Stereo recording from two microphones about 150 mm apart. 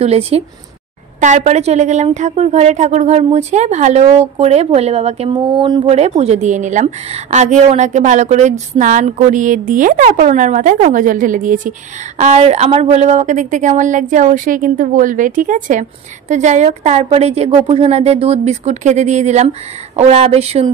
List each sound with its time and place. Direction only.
0.0 s speech: 40° right (ahead or behind)
5.3 s speech: 30° right (ahead or behind)
5.9 s a woman's voice: 45° right (ahead or behind); by 11.7 s 60° right (ahead or behind)
12.2 s speech: 50° right (ahead or behind)